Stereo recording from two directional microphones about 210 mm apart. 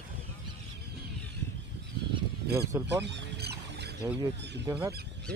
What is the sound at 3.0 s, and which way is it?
Rodents, 50° right (ahead or behind).